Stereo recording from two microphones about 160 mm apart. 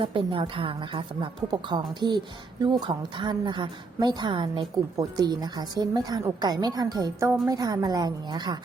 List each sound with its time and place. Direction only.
0.0 s a woman's voice: 35° right (ahead or behind)